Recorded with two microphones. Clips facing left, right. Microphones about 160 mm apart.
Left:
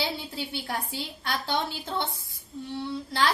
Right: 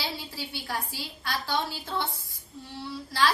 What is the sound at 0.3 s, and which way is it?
A woman's voice, 20° left (ahead or behind).